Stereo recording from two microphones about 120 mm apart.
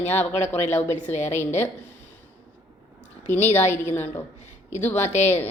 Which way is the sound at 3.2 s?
75° left (ahead or behind).